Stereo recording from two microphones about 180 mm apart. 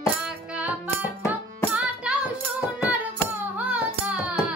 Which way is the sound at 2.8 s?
10° right (ahead or behind).